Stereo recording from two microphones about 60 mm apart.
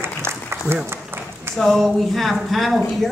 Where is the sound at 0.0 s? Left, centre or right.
Right.